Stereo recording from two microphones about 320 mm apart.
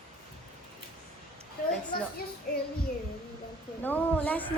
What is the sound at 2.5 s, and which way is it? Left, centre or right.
Child singing, left.